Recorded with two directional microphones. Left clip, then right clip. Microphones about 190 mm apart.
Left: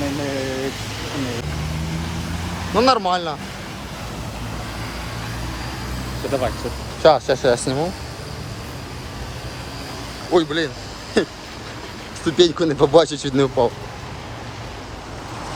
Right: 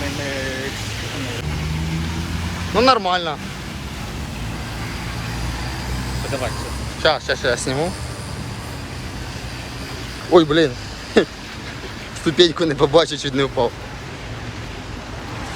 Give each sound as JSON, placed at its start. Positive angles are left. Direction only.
{"t": 2.7, "sound": "speech", "side_deg": 20}
{"t": 6.3, "sound": "speech", "side_deg": 55}
{"t": 7.0, "sound": "speech", "side_deg": 30}
{"t": 10.3, "sound": "speech", "side_deg": 5}